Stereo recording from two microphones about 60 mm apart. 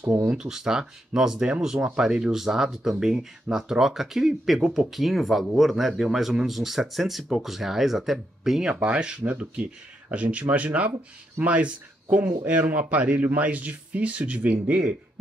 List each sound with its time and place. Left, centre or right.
0.3 s speech: centre